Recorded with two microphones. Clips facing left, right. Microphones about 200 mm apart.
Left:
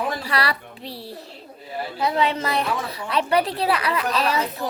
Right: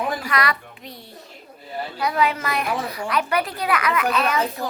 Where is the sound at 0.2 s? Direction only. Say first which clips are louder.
Right 1 dB; 30° left (ahead or behind).